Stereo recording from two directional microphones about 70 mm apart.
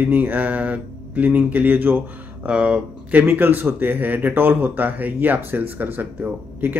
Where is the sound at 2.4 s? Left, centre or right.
Centre.